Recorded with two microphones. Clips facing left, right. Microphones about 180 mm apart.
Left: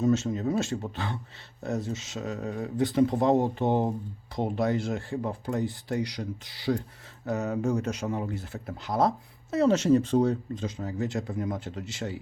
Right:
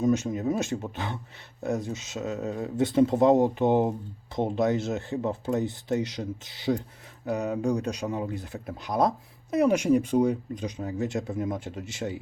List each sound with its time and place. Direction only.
0.0 s speech: 15° right (ahead or behind)